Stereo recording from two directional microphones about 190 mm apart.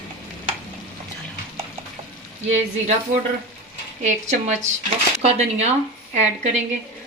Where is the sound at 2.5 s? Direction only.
35° right (ahead or behind).